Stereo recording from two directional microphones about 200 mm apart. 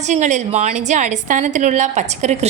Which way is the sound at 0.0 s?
35° right (ahead or behind).